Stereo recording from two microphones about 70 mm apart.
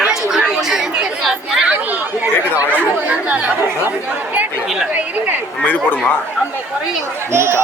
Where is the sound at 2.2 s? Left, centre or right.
Right.